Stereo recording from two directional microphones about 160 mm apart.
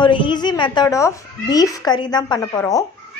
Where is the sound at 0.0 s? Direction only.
30° left (ahead or behind).